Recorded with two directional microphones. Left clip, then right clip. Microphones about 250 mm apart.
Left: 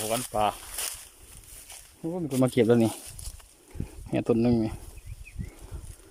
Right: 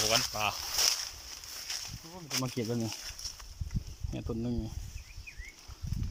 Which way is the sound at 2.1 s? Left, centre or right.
Left.